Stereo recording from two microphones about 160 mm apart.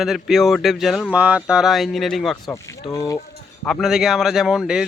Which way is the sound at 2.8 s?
20° left (ahead or behind).